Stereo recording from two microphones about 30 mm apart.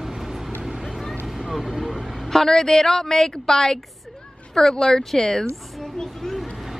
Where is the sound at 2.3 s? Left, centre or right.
Centre.